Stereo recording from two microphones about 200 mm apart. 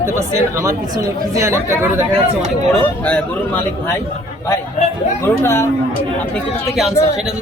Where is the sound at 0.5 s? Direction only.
15° right (ahead or behind).